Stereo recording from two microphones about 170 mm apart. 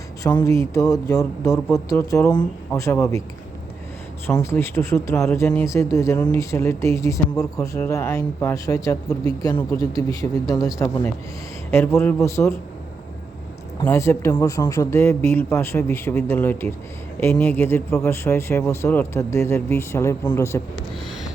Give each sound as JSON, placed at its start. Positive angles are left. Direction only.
{"t": 0.3, "sound": "speech", "side_deg": 15}
{"t": 1.5, "sound": "speech", "side_deg": 10}
{"t": 1.9, "sound": "speech", "side_deg": 20}
{"t": 4.4, "sound": "speech", "side_deg": 15}
{"t": 13.8, "sound": "speech", "side_deg": 15}